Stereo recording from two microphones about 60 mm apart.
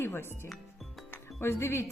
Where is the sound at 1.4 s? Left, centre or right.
Left.